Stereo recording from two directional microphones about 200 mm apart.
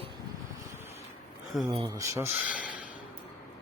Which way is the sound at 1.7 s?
20° right (ahead or behind).